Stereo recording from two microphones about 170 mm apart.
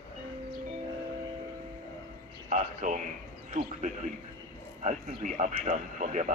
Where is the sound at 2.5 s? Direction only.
50° right (ahead or behind).